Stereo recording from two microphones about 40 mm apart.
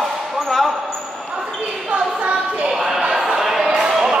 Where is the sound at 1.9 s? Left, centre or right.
Right.